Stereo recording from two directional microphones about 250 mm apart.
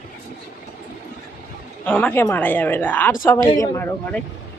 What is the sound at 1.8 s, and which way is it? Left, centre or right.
A woman's voice, centre.